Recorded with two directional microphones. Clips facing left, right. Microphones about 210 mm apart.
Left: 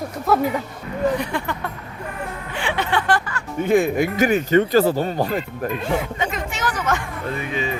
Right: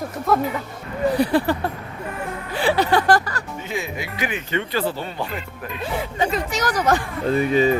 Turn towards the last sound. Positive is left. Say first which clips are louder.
# right 8 dB
turn(degrees=-40)  # may be behind; listen again after turning